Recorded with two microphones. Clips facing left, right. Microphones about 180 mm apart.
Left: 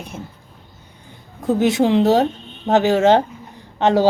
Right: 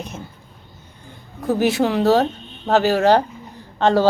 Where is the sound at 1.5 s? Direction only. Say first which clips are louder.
Left 3 dB; 20° left (ahead or behind).